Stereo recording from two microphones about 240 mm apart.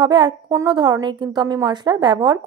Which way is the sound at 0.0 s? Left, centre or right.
Centre.